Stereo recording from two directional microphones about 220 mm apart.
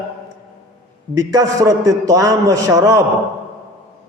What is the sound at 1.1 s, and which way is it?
A man's voice, 15° right (ahead or behind).